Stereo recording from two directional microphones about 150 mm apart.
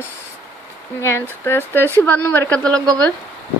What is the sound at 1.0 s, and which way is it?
A woman's voice, 20° left (ahead or behind).